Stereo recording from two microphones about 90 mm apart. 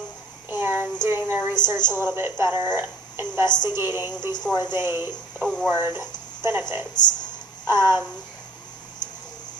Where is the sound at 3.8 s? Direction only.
25° right (ahead or behind).